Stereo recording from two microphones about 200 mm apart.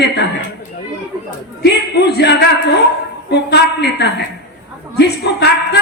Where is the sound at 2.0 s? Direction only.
55° left (ahead or behind).